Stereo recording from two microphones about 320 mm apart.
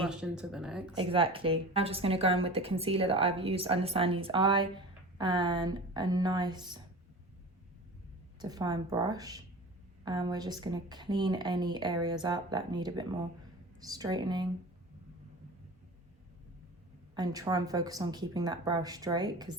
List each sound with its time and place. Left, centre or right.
0.0 s speech: centre
0.9 s speech: centre
8.4 s speech: centre
17.2 s speech: centre